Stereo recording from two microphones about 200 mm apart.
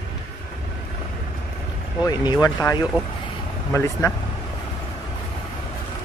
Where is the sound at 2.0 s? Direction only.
20° left (ahead or behind).